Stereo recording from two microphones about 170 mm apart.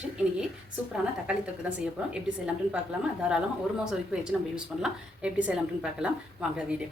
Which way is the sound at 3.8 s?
5° right (ahead or behind).